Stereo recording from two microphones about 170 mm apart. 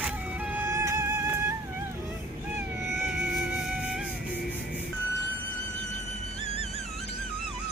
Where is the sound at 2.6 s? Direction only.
15° right (ahead or behind).